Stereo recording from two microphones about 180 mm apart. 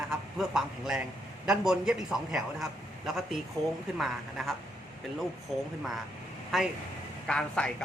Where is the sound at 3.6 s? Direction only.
20° right (ahead or behind).